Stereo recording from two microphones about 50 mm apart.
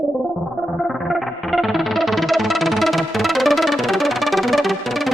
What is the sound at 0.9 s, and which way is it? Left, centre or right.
Music, centre.